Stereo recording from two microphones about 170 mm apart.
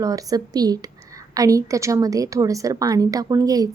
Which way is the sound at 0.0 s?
20° right (ahead or behind).